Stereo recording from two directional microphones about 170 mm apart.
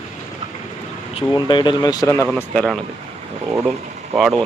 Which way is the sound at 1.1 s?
25° left (ahead or behind).